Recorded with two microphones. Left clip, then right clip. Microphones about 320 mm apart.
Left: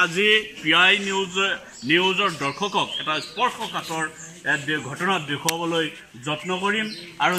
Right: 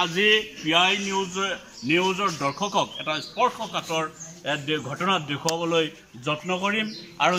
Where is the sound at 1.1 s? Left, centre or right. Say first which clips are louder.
Left 3 dB; centre.